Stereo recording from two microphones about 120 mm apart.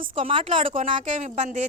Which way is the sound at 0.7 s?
90° right.